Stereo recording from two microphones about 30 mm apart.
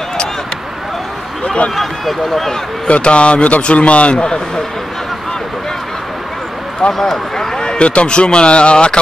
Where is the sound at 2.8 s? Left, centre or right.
Left.